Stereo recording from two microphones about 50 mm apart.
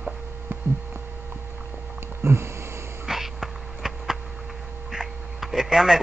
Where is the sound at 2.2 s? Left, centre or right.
Right.